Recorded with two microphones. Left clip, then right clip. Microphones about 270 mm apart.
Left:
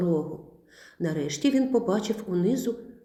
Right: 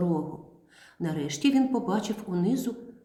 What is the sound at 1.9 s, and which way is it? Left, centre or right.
Speech, right.